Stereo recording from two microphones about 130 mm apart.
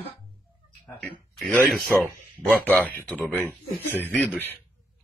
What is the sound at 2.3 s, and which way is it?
Grunt, 10° left (ahead or behind).